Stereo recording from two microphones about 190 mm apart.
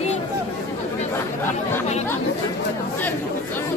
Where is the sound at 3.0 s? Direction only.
10° left (ahead or behind).